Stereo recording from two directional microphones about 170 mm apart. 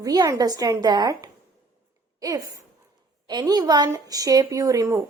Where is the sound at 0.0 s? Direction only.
20° right (ahead or behind).